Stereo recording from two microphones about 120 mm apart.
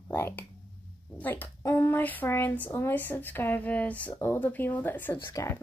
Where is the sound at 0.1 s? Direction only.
20° left (ahead or behind).